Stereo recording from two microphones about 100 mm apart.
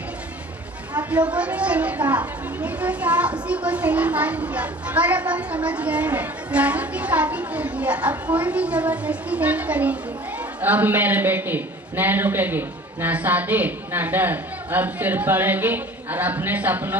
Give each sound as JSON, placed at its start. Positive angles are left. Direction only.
{"t": 1.1, "sound": "a child's voice", "side_deg": -10}